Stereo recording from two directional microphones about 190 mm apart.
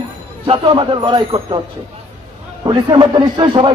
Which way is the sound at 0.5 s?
25° right (ahead or behind).